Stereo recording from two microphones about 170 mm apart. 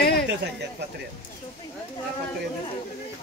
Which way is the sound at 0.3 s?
90° right.